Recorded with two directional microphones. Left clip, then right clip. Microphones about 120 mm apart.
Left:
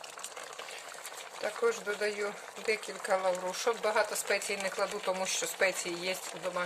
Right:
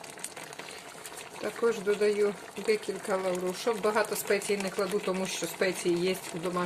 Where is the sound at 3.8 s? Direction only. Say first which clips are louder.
Right 3 dB; 20° left (ahead or behind).